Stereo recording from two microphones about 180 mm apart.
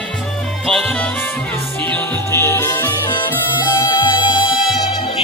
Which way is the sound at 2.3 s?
15° left (ahead or behind).